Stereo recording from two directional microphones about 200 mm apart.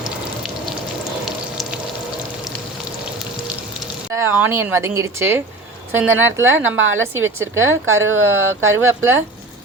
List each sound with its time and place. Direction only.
4.1 s speech: 10° right (ahead or behind)
6.7 s speech: 80° right
8.8 s speech: 10° right (ahead or behind)